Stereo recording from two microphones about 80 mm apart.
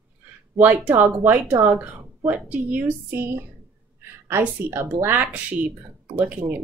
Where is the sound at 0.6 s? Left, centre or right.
Right.